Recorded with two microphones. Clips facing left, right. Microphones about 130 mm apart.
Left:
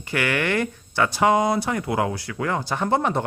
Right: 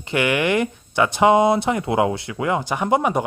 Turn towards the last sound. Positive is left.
turn(degrees=-15)  # may be behind; listen again after turning